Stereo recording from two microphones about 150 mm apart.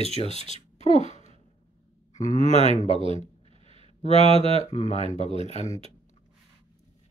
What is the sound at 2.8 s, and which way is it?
Speech, 35° right (ahead or behind).